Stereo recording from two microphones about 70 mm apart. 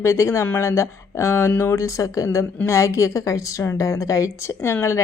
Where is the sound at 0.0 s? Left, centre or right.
Left.